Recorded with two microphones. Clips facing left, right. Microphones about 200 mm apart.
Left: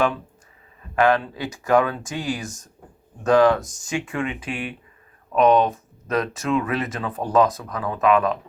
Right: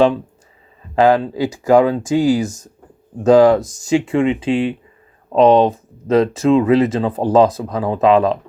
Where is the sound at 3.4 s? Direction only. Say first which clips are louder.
Right 6 dB; 15° right (ahead or behind).